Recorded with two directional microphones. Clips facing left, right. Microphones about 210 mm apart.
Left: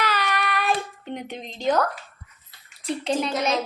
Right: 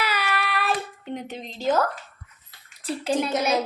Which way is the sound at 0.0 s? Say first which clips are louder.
Left 1 dB; 5° right (ahead or behind).